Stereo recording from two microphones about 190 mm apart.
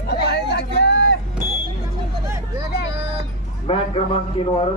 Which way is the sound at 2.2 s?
15° right (ahead or behind).